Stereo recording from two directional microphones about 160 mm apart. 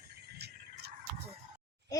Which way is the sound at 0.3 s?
90° right.